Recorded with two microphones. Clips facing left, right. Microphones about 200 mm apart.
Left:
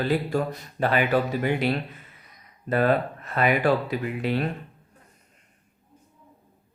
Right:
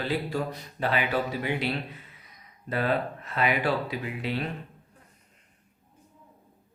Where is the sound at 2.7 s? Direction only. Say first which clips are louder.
Left 5 dB; 50° left (ahead or behind).